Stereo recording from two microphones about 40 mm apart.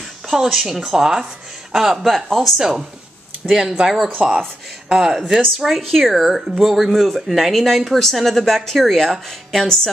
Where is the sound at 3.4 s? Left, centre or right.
Right.